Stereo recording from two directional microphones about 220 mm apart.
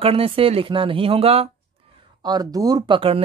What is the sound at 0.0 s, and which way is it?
Speech, 25° right (ahead or behind).